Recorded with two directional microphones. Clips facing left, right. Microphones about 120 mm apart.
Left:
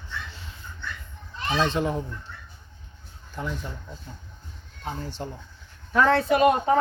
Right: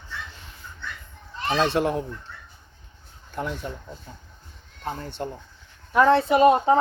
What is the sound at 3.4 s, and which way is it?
Speech, 60° right (ahead or behind).